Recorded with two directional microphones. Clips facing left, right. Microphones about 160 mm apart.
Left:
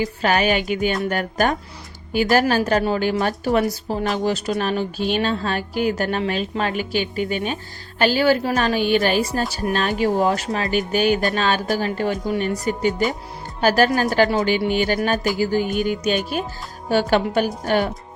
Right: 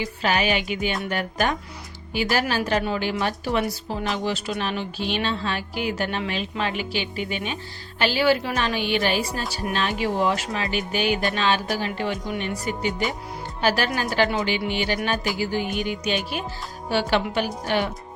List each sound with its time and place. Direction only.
0.0 s a woman's voice: 45° left (ahead or behind)